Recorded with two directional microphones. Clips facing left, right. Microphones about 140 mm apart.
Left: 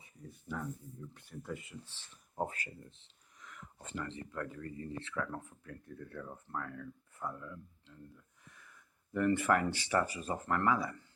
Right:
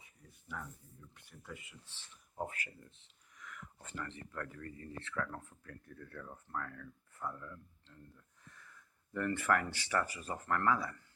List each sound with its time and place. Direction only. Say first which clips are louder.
1.1 s speech: left 7 dB; 35° left (ahead or behind); by 11.0 s 15° left (ahead or behind)